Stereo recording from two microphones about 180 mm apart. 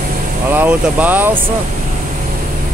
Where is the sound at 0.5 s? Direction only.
10° right (ahead or behind).